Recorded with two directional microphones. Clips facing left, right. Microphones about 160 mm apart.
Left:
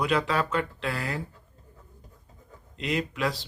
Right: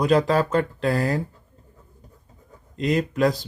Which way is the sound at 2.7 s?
40° right (ahead or behind).